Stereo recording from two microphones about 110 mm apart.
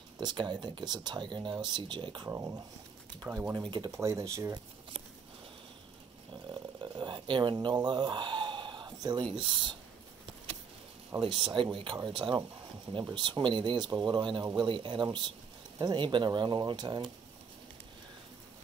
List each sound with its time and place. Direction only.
0.2 s speech: 40° right (ahead or behind)
2.2 s speech: 25° right (ahead or behind)
3.3 s speech: 15° right (ahead or behind)
3.9 s speech: 25° right (ahead or behind)
6.3 s a sound: 45° right (ahead or behind)
11.1 s speech: 50° right (ahead or behind)